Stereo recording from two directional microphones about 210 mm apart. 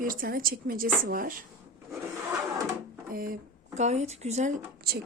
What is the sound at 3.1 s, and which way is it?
Speech, 45° right (ahead or behind).